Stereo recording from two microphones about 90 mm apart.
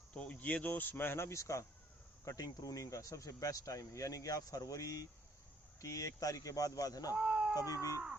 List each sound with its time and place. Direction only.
0.1 s speech: 15° left (ahead or behind); by 7.2 s 45° left (ahead or behind)
7.2 s a sound: 5° right (ahead or behind)
7.5 s speech: 40° left (ahead or behind)